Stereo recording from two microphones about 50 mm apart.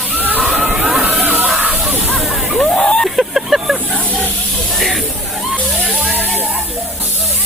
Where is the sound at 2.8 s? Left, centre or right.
Left.